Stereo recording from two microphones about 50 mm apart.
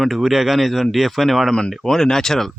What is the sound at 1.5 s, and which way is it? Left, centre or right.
Speech, centre.